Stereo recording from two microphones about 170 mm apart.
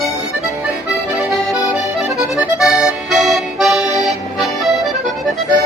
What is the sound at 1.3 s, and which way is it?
Accordion, 5° right (ahead or behind).